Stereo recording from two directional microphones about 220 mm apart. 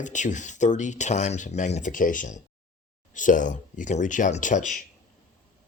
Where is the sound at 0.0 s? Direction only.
35° left (ahead or behind).